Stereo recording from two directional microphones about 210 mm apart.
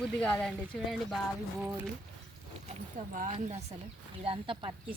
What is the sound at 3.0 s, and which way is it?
Speech, 35° right (ahead or behind).